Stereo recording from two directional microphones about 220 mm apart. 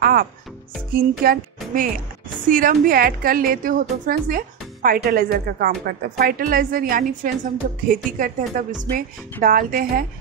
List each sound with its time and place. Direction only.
0.0 s music: 40° right (ahead or behind)
1.2 s a woman's voice: 40° right (ahead or behind)